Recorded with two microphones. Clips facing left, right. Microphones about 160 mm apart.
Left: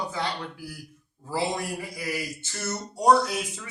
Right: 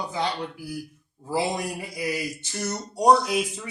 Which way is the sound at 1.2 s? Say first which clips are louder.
Right 2 dB; 15° right (ahead or behind).